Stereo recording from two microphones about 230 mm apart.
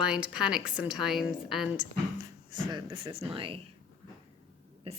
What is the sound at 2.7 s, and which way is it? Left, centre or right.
Speech, right.